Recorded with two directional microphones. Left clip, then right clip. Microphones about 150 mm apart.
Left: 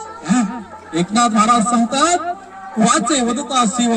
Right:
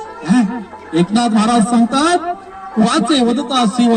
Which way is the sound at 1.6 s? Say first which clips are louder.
Right 1 dB; 35° left (ahead or behind).